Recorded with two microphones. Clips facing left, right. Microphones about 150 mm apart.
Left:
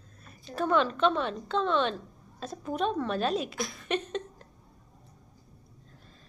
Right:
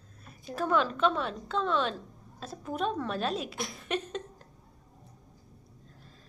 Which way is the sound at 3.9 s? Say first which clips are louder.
Left 2 dB; 5° right (ahead or behind).